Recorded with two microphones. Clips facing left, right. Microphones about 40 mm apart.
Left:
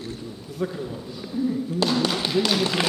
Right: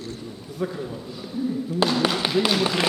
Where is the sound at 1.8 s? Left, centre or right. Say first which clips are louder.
Right 2 dB; centre.